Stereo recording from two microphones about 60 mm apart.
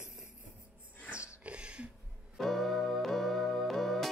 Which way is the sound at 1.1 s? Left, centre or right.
Centre.